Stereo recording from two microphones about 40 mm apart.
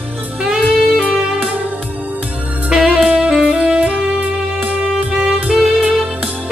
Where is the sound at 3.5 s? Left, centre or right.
Right.